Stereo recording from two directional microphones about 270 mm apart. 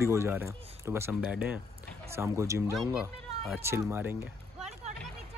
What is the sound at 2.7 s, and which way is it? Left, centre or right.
Speech, centre.